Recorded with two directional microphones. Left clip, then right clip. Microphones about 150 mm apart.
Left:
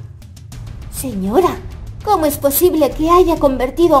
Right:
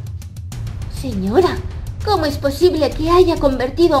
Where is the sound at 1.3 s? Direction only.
5° left (ahead or behind).